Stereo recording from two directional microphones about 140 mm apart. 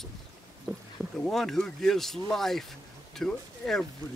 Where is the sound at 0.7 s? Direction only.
15° right (ahead or behind).